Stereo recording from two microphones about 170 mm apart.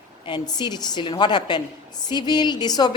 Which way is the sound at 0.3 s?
25° left (ahead or behind).